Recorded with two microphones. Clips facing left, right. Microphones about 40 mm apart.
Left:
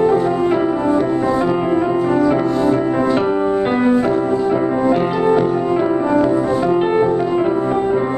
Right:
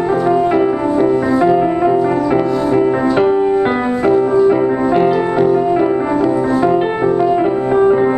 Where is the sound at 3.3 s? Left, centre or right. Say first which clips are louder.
Right 3 dB; centre.